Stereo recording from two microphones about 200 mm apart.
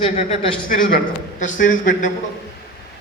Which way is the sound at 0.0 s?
30° left (ahead or behind).